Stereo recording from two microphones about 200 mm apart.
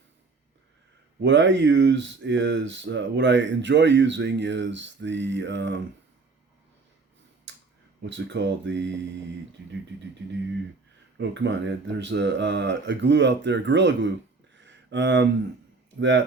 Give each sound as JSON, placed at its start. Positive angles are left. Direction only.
{"t": 1.2, "sound": "speech", "side_deg": -65}
{"t": 8.0, "sound": "speech", "side_deg": -65}
{"t": 11.2, "sound": "speech", "side_deg": -65}
{"t": 14.6, "sound": "a sound", "side_deg": -65}
{"t": 16.0, "sound": "speech", "side_deg": -65}